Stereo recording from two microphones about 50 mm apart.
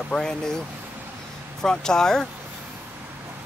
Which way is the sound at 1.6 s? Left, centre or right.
Centre.